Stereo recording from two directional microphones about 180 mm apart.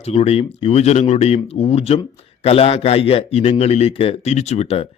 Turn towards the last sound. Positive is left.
turn(degrees=35)  # may be behind; listen again after turning